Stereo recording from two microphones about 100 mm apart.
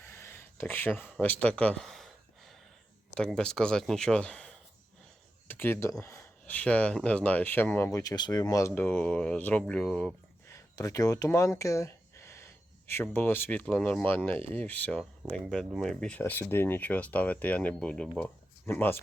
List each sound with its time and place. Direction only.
0.0 s a sound: 25° left (ahead or behind); by 2.6 s centre (ahead or behind)
3.2 s speech: 5° left (ahead or behind)
5.5 s speech: 20° left (ahead or behind)
6.5 s speech: 15° left (ahead or behind)
7.9 s speech: 40° left (ahead or behind)
8.7 s speech: 20° left (ahead or behind)
10.5 s speech: 35° left (ahead or behind); by 18.1 s 10° left (ahead or behind)
18.6 s speech: 20° left (ahead or behind)